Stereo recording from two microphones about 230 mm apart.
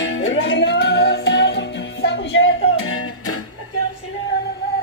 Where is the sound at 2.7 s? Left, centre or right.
Left.